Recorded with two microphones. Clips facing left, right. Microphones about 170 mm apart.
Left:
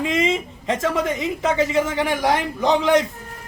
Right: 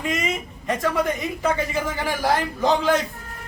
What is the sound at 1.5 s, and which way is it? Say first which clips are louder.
Speech: left 4 dB; 85° left.